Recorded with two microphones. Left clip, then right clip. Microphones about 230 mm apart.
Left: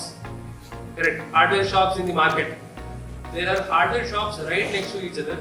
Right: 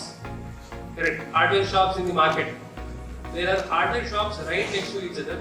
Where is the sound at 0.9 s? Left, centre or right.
Left.